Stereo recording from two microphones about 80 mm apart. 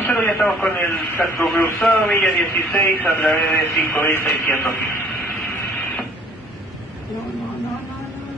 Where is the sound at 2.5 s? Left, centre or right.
Left.